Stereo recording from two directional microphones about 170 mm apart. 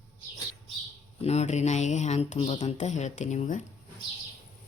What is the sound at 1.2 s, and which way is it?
Speech, 40° left (ahead or behind).